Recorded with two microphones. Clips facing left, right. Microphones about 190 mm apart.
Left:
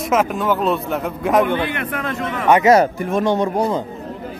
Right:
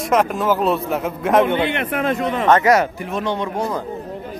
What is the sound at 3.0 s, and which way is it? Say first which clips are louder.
Speech: left 5 dB; 50° left (ahead or behind).